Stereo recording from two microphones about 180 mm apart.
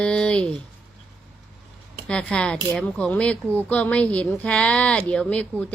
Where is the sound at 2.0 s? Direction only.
5° left (ahead or behind).